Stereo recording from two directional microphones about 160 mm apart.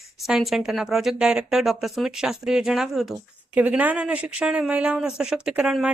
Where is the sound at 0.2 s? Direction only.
Centre (ahead or behind).